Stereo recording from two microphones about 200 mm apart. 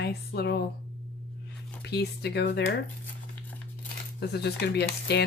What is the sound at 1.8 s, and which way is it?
Speech, 55° left (ahead or behind).